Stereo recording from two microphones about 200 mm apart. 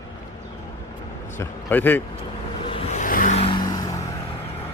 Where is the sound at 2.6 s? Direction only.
30° left (ahead or behind).